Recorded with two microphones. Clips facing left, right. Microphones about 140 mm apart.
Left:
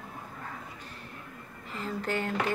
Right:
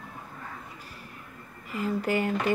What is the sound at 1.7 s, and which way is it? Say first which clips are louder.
Speech: right 5 dB; 10° right (ahead or behind).